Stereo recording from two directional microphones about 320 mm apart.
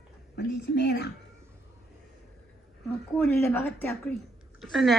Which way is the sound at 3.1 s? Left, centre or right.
Centre.